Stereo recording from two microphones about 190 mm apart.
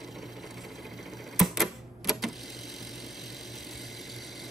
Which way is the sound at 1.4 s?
Centre (ahead or behind).